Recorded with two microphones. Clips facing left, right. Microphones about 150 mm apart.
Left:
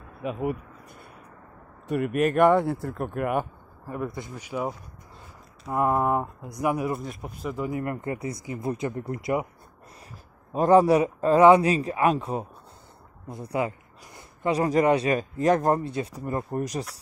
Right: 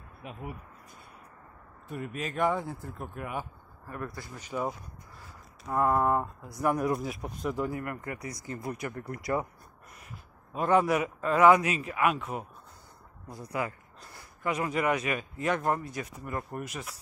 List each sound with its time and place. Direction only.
0.2 s speech: 80° left; by 3.4 s 60° left (ahead or behind)
4.0 s speech: 15° left (ahead or behind)
7.7 s speech: 25° left (ahead or behind)
10.5 s a man's voice: 35° left (ahead or behind)